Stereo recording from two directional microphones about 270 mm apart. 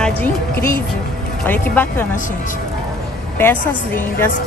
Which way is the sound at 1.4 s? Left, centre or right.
Centre.